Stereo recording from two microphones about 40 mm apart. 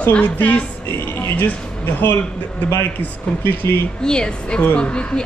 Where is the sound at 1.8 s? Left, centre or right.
Left.